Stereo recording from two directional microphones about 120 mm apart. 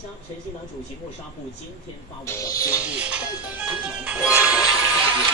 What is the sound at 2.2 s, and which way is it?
Speech, 25° left (ahead or behind).